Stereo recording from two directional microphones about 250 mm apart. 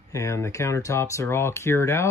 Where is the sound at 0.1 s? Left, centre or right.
Centre.